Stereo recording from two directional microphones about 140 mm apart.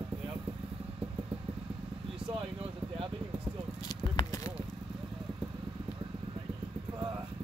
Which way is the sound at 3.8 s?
25° left (ahead or behind).